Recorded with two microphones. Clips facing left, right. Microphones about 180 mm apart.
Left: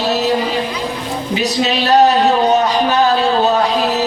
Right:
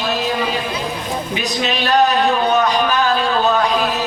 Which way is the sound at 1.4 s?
35° left (ahead or behind).